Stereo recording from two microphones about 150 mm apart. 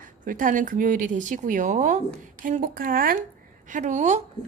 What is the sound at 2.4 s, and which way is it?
Speech, 65° right (ahead or behind).